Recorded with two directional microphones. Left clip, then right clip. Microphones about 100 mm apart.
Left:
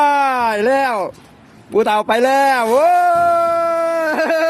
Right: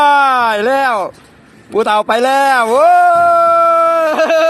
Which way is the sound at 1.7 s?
35° left (ahead or behind).